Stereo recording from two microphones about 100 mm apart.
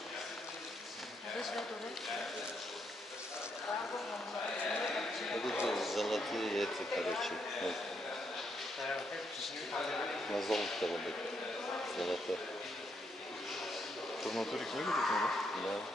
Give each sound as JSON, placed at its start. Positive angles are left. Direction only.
{"t": 1.4, "sound": "speech", "side_deg": 0}
{"t": 4.6, "sound": "a sound", "side_deg": 5}
{"t": 9.4, "sound": "speech", "side_deg": 0}
{"t": 14.2, "sound": "speech", "side_deg": 0}